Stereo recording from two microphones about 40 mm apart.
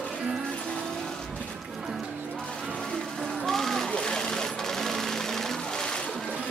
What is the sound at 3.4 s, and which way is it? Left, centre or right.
Sewing machine, centre.